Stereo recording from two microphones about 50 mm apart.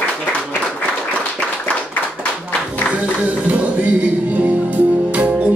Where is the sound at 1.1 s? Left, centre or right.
Left.